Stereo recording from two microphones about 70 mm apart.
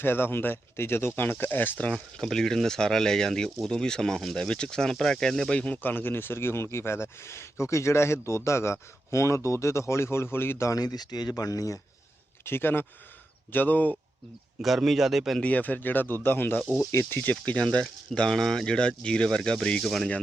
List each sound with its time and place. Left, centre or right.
0.0 s speech: left
1.9 s speech: centre
5.5 s speech: centre; by 10.7 s left
10.7 s speech: left
12.5 s speech: left
14.6 s a man's voice: centre
15.4 s a man's voice: left; by 20.1 s centre